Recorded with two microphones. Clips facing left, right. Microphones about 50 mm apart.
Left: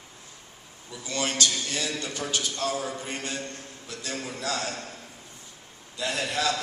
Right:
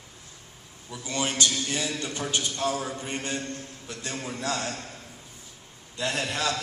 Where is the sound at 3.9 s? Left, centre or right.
Right.